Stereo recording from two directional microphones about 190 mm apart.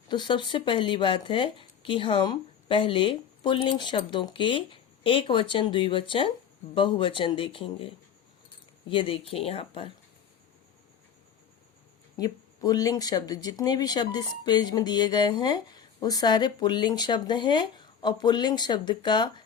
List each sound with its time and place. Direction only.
0.1 s speech: 25° left (ahead or behind)
12.1 s speech: 20° left (ahead or behind)